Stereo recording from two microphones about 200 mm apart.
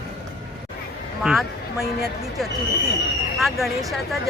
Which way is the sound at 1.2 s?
Centre (ahead or behind).